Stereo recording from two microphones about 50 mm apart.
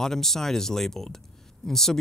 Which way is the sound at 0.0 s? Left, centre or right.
Centre.